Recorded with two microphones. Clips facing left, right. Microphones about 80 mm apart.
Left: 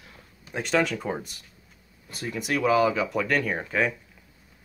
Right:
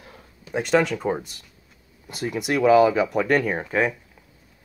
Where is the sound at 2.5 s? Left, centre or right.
Right.